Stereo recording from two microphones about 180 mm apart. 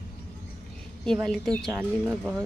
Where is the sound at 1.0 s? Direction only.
5° left (ahead or behind).